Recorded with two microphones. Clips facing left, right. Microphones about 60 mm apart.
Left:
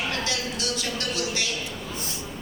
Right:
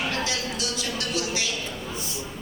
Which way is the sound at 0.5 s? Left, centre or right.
Left.